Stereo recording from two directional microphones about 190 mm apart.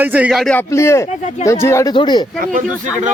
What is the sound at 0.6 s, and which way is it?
Speech, 15° left (ahead or behind).